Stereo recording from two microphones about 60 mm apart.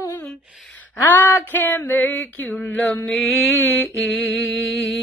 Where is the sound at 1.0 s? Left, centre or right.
Left.